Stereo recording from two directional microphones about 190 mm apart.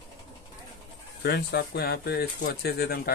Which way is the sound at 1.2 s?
60° left (ahead or behind).